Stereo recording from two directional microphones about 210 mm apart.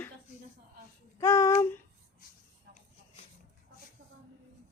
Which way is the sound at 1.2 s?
15° left (ahead or behind).